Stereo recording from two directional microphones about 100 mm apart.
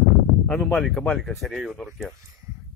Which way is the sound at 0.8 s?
5° left (ahead or behind).